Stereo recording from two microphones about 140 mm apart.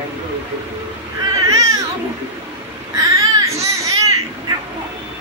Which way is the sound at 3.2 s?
25° right (ahead or behind).